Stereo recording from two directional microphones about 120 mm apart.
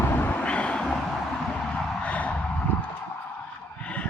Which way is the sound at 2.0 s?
10° left (ahead or behind).